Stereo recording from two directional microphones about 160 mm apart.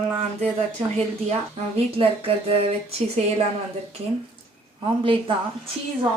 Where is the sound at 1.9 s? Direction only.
35° right (ahead or behind).